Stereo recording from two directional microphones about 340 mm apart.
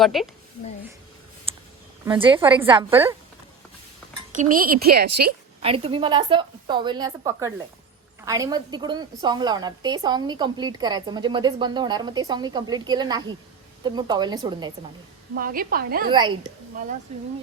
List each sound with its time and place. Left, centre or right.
0.0 s a woman's voice: centre
1.5 s a sound: centre
2.0 s a woman's voice: centre
4.5 s a woman's voice: right
5.6 s a woman's voice: centre
15.4 s a woman's voice: right
16.0 s a woman's voice: centre